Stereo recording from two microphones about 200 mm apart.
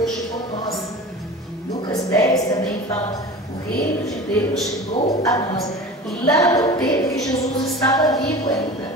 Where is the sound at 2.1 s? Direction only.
15° left (ahead or behind).